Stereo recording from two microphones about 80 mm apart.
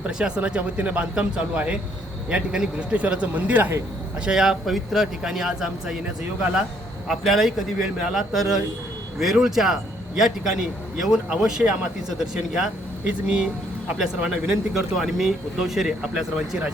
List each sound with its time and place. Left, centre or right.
0.2 s speech: centre
4.3 s speech: centre
7.1 s speech: centre